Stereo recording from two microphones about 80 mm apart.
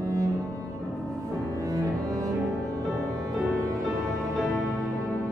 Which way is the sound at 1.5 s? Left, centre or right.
Right.